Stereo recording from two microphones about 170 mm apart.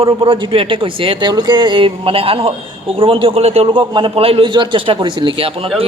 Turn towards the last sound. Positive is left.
turn(degrees=-30)  # may be behind; listen again after turning